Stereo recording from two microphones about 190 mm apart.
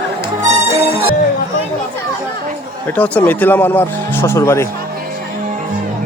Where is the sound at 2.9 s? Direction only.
10° left (ahead or behind).